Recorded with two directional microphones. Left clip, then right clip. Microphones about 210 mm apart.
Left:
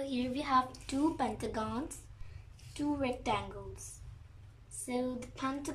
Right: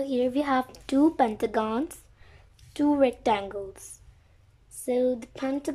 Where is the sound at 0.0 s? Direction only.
30° right (ahead or behind).